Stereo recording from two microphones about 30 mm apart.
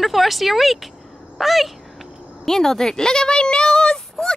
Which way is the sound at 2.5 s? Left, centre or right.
Centre.